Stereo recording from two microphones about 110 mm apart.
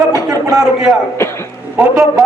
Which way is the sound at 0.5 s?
5° right (ahead or behind).